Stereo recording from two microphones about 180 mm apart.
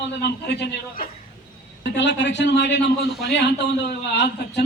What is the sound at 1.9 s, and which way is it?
A man's voice, 80° left.